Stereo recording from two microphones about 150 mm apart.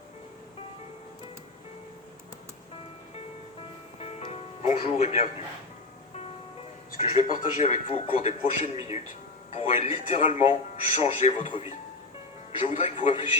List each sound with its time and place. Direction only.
4.0 s music: 45° left (ahead or behind)
6.9 s a man's voice: 55° left (ahead or behind); by 13.1 s 40° left (ahead or behind)